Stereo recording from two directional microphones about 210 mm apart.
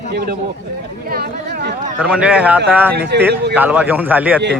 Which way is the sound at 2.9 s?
50° right (ahead or behind).